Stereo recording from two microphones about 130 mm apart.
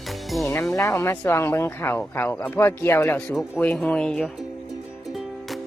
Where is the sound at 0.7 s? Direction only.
20° left (ahead or behind).